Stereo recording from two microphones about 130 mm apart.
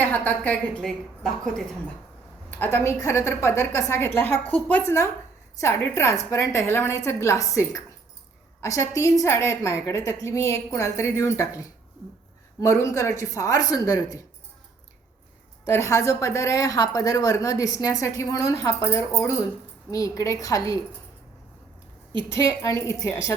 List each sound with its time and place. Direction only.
0.0 s a woman's voice: 10° left (ahead or behind)
2.5 s a woman's voice: 15° left (ahead or behind)
15.6 s a woman's voice: 20° left (ahead or behind)
22.3 s a woman's voice: 25° left (ahead or behind)